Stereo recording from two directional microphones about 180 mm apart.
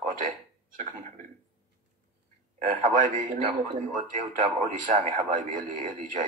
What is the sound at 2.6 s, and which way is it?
A man's voice, 45° right (ahead or behind).